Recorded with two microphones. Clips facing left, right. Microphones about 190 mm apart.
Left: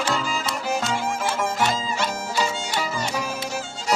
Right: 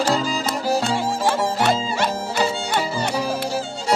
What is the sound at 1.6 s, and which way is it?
Music, 60° right (ahead or behind).